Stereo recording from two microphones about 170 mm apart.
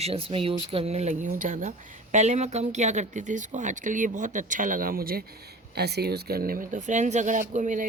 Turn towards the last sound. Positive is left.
turn(degrees=-50)  # may be behind; listen again after turning